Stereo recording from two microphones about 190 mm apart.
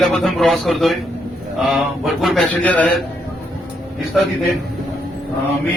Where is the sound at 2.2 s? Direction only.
5° left (ahead or behind).